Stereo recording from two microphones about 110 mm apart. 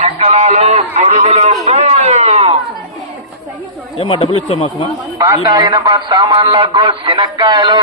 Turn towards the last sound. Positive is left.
turn(degrees=-45)  # may be behind; listen again after turning